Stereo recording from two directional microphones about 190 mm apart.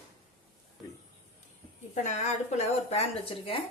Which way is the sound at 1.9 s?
40° left (ahead or behind).